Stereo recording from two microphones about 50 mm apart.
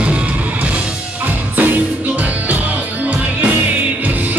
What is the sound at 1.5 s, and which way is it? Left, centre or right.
Music, right.